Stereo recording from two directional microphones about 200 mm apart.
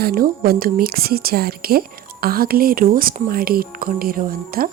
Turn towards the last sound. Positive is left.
turn(degrees=-45)  # may be behind; listen again after turning